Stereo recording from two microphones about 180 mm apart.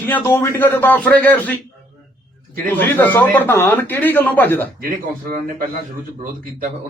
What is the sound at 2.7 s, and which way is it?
A man's voice, 10° left (ahead or behind).